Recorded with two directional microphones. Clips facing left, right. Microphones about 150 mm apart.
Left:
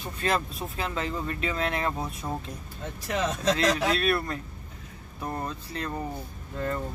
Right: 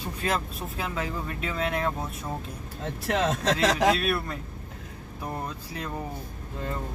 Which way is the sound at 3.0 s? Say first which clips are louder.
Right 1 dB; 75° right (ahead or behind).